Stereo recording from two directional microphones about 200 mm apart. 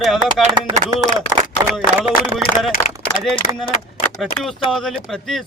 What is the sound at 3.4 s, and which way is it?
Speech, 35° left (ahead or behind).